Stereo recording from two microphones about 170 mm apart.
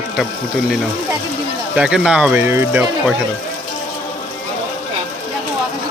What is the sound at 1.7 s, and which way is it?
Speech, 5° right (ahead or behind).